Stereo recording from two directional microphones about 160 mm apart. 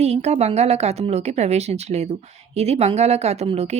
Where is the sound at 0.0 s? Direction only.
40° right (ahead or behind).